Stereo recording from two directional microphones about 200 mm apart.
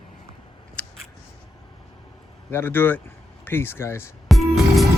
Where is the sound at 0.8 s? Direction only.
5° left (ahead or behind).